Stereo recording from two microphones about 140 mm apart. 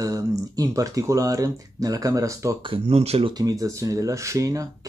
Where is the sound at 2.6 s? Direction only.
40° right (ahead or behind).